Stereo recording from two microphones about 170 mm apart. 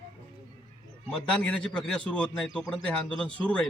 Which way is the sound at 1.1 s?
5° left (ahead or behind).